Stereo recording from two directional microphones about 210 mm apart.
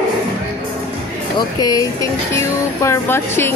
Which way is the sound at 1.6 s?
15° left (ahead or behind).